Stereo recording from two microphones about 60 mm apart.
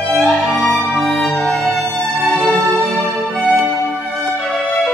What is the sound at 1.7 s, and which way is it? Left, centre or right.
Music, centre.